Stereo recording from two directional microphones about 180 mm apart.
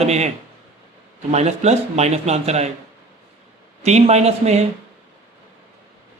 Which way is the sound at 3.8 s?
35° right (ahead or behind).